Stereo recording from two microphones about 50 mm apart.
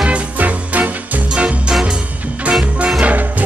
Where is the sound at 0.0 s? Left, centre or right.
Right.